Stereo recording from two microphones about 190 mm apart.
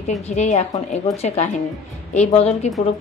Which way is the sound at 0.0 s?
35° left (ahead or behind).